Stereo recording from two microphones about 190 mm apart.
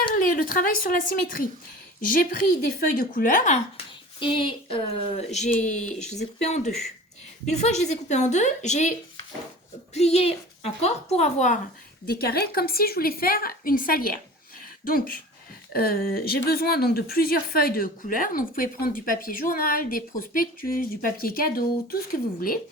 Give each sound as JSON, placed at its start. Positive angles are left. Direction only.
{"t": 0.1, "sound": "a woman's voice", "side_deg": 45}
{"t": 4.2, "sound": "speech", "side_deg": 25}
{"t": 12.0, "sound": "a woman's voice", "side_deg": 55}
{"t": 14.6, "sound": "a sound", "side_deg": 50}
{"t": 15.7, "sound": "a woman's voice", "side_deg": 50}